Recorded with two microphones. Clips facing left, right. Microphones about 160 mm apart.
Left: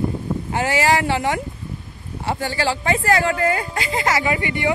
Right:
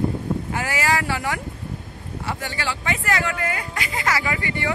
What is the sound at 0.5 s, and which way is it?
Speech, 25° left (ahead or behind).